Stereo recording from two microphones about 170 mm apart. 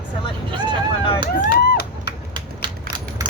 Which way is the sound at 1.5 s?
65° left (ahead or behind).